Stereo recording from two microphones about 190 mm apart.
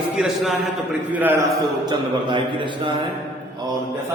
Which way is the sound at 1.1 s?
10° right (ahead or behind).